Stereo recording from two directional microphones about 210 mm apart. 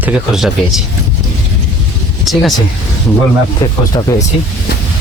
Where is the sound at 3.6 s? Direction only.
15° left (ahead or behind).